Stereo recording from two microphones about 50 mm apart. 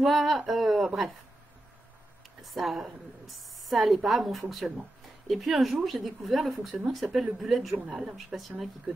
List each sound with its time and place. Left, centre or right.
0.0 s a woman's voice: centre
2.4 s a woman's voice: centre
7.0 s speech: right
7.4 s a woman's voice: centre